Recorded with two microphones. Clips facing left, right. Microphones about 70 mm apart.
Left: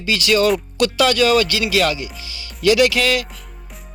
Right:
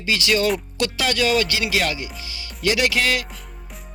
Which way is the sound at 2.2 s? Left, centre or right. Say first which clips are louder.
Left 7 dB; left.